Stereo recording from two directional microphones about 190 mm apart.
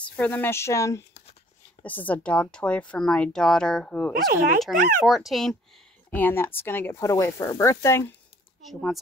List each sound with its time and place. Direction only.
0.0 s a woman's voice: 10° left (ahead or behind)
4.3 s speech: 45° right (ahead or behind)
5.0 s a woman's voice: centre (ahead or behind); by 8.1 s 15° left (ahead or behind)
8.6 s a woman's voice: centre (ahead or behind)